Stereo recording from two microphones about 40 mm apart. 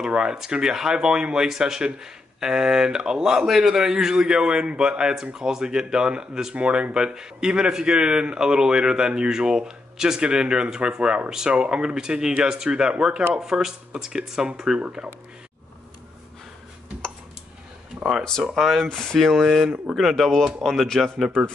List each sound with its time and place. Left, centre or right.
0.0 s speech: right
14.8 s speech: right
18.6 s speech: centre
18.9 s speech: centre
19.1 s speech: centre